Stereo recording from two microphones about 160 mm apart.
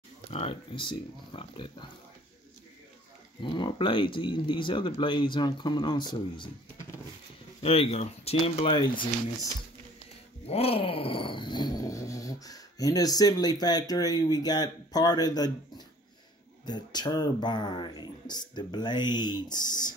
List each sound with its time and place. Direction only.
0.3 s speech: 40° left (ahead or behind)
3.4 s speech: 30° left (ahead or behind)
7.6 s speech: 40° left (ahead or behind)
10.4 s groan: 40° left (ahead or behind)
16.6 s speech: 25° left (ahead or behind)